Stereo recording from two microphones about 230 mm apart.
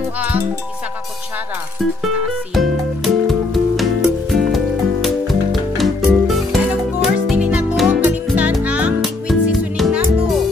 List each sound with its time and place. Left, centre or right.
2.5 s music: centre